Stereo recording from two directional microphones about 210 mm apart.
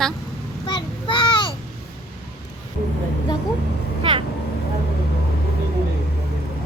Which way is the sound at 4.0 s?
25° right (ahead or behind).